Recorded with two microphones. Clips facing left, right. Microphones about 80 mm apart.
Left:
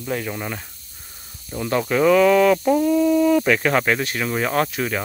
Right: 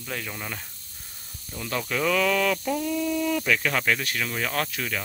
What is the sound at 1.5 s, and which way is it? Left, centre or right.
Speech, left.